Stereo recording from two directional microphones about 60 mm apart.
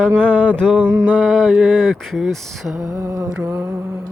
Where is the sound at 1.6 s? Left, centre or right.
Centre.